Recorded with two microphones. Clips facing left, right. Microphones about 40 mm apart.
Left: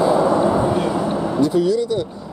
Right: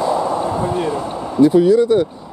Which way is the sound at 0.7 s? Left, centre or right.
Centre.